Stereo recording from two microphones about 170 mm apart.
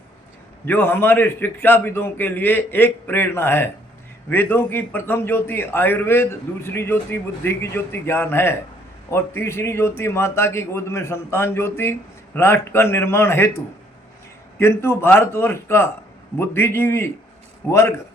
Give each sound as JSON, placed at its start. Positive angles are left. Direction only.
{"t": 0.6, "sound": "a man's voice", "side_deg": 10}
{"t": 14.6, "sound": "a man's voice", "side_deg": 15}